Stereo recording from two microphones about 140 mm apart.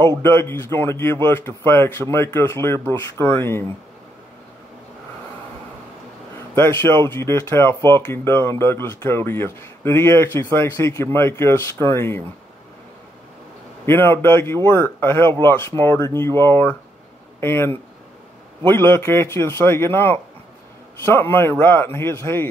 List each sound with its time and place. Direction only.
0.2 s speech: 15° left (ahead or behind)
6.5 s speech: 15° left (ahead or behind)
13.8 s speech: 15° left (ahead or behind)